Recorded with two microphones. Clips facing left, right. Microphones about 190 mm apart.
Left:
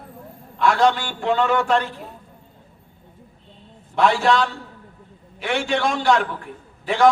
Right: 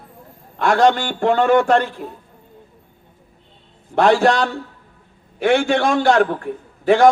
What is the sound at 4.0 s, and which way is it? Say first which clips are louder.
Speech: right 4 dB; 50° right (ahead or behind).